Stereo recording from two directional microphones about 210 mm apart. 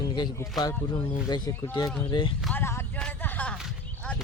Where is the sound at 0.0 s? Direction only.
20° left (ahead or behind).